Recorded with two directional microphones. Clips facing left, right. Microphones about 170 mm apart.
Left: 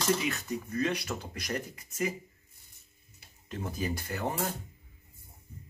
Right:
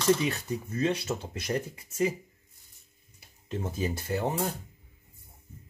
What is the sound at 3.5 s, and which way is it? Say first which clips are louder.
Speech: right 3 dB; 25° right (ahead or behind).